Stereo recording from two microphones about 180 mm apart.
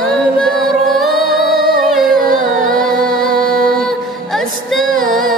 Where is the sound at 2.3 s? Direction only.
50° right (ahead or behind).